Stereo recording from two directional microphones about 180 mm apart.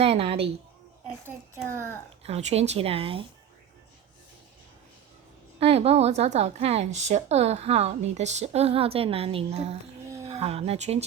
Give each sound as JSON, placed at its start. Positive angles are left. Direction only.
{"t": 0.0, "sound": "a woman's voice", "side_deg": -30}
{"t": 1.0, "sound": "a sound", "side_deg": -5}
{"t": 2.2, "sound": "a woman's voice", "side_deg": -35}
{"t": 5.5, "sound": "a woman's voice", "side_deg": -35}